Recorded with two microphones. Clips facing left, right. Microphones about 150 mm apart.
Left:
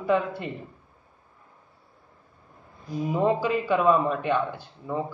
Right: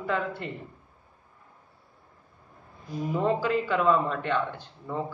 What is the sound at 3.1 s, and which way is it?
A man's voice, 15° left (ahead or behind).